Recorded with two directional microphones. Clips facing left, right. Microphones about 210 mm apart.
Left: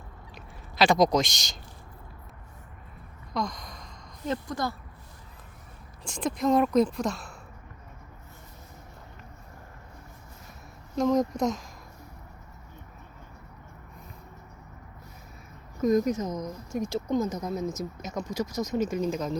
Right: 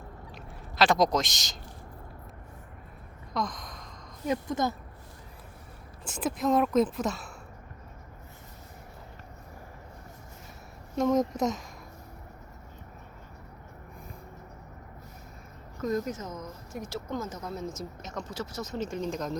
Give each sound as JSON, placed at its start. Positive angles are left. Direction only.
{"t": 0.3, "sound": "a sound", "side_deg": 0}
{"t": 3.3, "sound": "a sound", "side_deg": 0}
{"t": 4.3, "sound": "a woman's voice", "side_deg": -20}
{"t": 6.1, "sound": "speech", "side_deg": -5}
{"t": 10.9, "sound": "speech", "side_deg": 0}
{"t": 15.8, "sound": "speech", "side_deg": 15}